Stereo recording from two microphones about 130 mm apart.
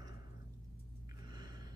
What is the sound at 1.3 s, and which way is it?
Gasp, 35° right (ahead or behind).